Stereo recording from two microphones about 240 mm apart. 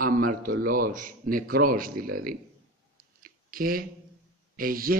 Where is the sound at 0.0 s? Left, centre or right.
Right.